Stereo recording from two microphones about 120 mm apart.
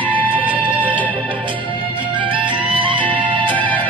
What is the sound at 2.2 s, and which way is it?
Music, 45° right (ahead or behind).